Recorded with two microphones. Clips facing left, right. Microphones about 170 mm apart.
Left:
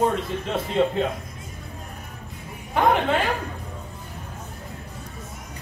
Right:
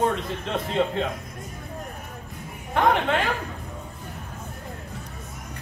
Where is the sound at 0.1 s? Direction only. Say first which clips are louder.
Left 2 dB; 5° left (ahead or behind).